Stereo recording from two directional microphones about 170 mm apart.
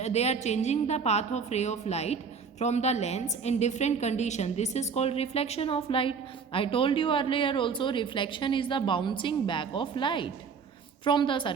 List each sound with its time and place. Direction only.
0.0 s a woman's voice: 40° left (ahead or behind)